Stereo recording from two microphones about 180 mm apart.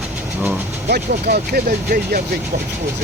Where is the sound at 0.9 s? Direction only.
55° right (ahead or behind).